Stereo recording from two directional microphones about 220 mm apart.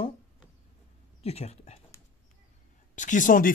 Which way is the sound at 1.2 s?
30° left (ahead or behind).